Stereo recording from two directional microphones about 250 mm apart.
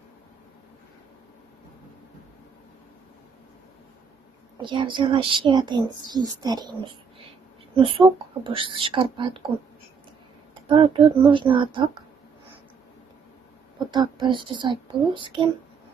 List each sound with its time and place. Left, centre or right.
4.6 s a woman's voice: centre
10.7 s a woman's voice: centre
13.7 s a woman's voice: centre